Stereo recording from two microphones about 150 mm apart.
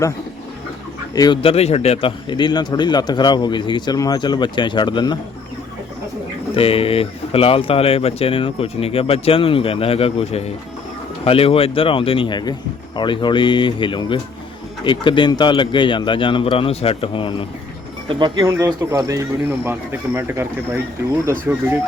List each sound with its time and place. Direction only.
1.1 s speech: 25° left (ahead or behind)
1.4 s speech: 40° left (ahead or behind)
6.6 s speech: 40° left (ahead or behind)
18.1 s speech: 30° right (ahead or behind)
18.4 s speech: 20° right (ahead or behind)